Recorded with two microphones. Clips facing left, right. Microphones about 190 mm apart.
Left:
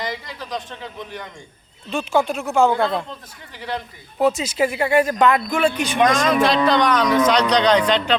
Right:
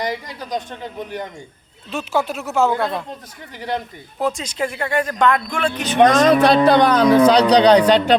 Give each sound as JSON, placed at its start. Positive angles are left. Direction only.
{"t": 0.0, "sound": "speech", "side_deg": -45}
{"t": 1.9, "sound": "speech", "side_deg": -5}
{"t": 4.2, "sound": "speech", "side_deg": 5}
{"t": 6.1, "sound": "speech", "side_deg": -40}